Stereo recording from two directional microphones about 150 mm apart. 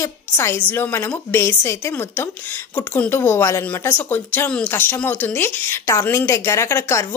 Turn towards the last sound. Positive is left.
turn(degrees=20)  # may be behind; listen again after turning